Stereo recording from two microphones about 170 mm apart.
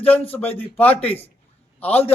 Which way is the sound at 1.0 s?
35° left (ahead or behind).